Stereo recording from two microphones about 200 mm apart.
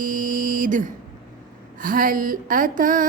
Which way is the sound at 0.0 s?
40° right (ahead or behind).